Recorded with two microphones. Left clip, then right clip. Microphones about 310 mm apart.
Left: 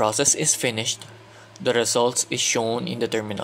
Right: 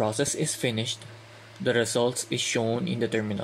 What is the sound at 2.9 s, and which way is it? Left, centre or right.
Speech, left.